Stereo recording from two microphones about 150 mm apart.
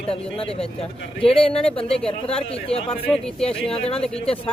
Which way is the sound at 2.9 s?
5° left (ahead or behind).